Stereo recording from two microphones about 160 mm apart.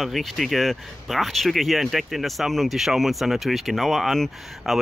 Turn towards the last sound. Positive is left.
turn(degrees=0)  # may be behind; listen again after turning